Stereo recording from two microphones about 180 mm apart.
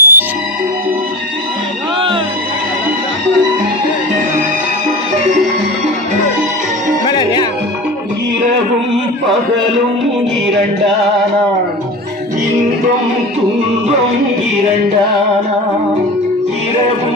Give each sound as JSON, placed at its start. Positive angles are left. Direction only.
{"t": 0.0, "sound": "music", "side_deg": -10}
{"t": 7.1, "sound": "music", "side_deg": 25}